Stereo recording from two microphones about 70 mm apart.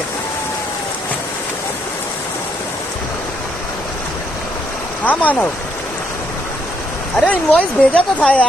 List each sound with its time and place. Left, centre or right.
5.0 s speech: left
7.2 s speech: centre